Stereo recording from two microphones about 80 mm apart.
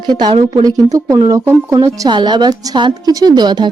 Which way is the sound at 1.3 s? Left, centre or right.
Right.